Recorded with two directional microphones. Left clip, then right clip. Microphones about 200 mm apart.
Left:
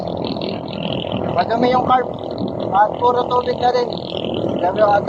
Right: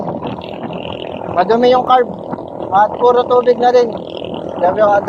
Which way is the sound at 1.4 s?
60° right (ahead or behind).